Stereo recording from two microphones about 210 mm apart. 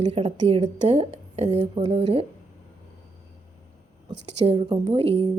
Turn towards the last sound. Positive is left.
turn(degrees=-30)  # may be behind; listen again after turning